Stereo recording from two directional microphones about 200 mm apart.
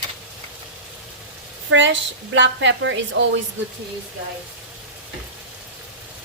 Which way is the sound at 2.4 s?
65° right (ahead or behind).